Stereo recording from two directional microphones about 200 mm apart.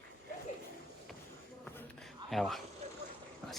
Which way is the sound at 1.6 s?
5° left (ahead or behind).